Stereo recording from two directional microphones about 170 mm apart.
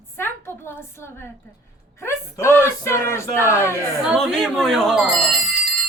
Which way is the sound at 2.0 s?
15° left (ahead or behind).